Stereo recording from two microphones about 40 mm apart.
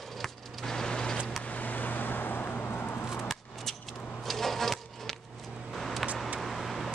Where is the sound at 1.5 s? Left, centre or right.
Left.